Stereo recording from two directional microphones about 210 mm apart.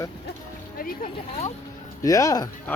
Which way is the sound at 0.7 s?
45° left (ahead or behind).